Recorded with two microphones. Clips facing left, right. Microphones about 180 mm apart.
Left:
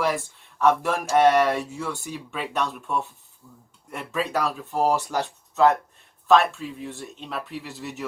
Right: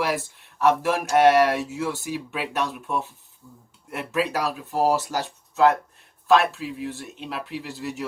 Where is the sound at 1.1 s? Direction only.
5° right (ahead or behind).